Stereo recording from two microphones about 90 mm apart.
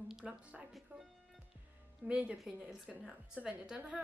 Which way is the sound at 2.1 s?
15° right (ahead or behind).